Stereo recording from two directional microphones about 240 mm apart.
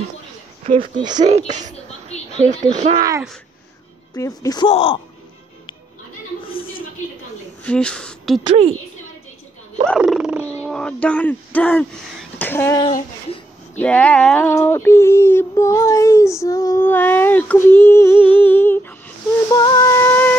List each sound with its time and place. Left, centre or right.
0.7 s speech: right
3.0 s speech: centre
4.1 s speech: centre
6.4 s a sound: left
7.6 s speech: centre
9.8 s speech: centre
19.5 s music: centre